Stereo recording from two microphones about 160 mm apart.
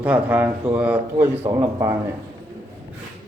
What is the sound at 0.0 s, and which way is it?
Speech, 10° right (ahead or behind).